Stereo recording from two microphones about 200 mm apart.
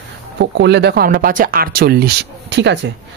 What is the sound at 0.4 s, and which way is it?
Speech, 60° right (ahead or behind).